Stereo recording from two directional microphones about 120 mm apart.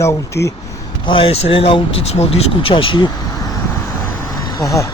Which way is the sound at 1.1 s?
45° left (ahead or behind).